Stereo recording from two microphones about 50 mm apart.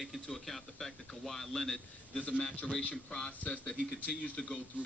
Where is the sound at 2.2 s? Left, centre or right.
Left.